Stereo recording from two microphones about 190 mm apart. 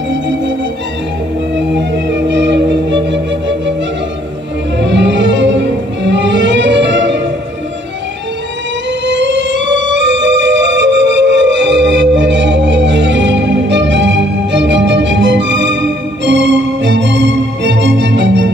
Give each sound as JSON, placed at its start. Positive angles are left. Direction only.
{"t": 1.7, "sound": "music", "side_deg": -70}
{"t": 4.7, "sound": "music", "side_deg": -70}
{"t": 9.0, "sound": "music", "side_deg": -70}